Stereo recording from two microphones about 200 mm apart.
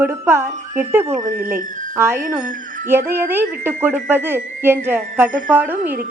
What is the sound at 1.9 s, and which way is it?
A woman's voice, 10° right (ahead or behind).